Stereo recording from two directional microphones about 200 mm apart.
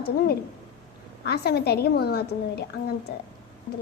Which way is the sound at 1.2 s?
55° left (ahead or behind).